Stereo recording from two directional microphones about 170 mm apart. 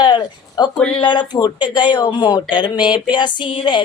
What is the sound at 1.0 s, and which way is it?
Speech, 25° left (ahead or behind).